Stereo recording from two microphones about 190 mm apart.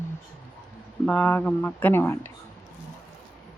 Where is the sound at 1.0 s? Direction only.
5° left (ahead or behind).